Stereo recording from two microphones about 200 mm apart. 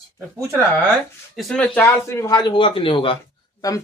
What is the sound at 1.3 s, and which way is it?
Speech, 5° left (ahead or behind).